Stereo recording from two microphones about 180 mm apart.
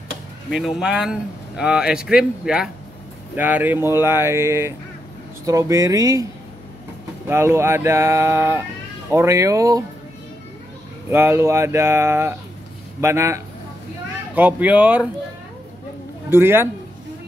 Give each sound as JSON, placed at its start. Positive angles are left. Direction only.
{"t": 0.5, "sound": "speech", "side_deg": 0}
{"t": 7.2, "sound": "speech", "side_deg": -15}
{"t": 11.1, "sound": "speech", "side_deg": -15}
{"t": 16.3, "sound": "a man's voice", "side_deg": -15}